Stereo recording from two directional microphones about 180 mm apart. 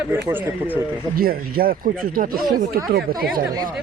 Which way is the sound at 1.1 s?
55° right (ahead or behind).